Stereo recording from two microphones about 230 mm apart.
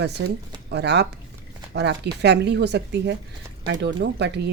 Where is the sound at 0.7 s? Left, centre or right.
Right.